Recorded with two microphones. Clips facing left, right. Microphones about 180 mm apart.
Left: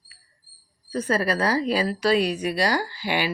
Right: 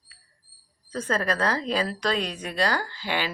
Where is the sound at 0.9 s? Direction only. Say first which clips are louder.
Left 3 dB; 10° left (ahead or behind).